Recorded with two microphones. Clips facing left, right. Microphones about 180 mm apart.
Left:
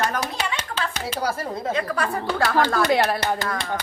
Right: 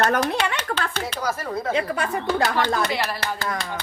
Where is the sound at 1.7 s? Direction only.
25° right (ahead or behind).